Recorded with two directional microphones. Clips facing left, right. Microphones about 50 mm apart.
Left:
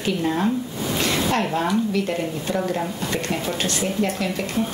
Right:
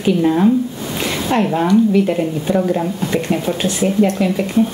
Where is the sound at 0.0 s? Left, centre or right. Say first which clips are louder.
Right 8 dB; centre.